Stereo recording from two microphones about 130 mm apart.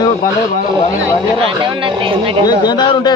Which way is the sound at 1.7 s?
40° right (ahead or behind).